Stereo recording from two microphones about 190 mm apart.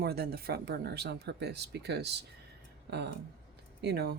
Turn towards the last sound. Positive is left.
turn(degrees=-60)  # may be behind; listen again after turning